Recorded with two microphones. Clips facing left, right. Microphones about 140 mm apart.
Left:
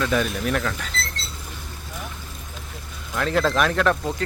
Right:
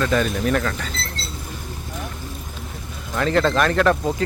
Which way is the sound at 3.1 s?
Centre (ahead or behind).